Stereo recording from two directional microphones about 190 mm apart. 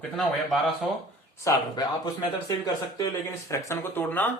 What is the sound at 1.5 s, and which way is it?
Speech, 20° left (ahead or behind).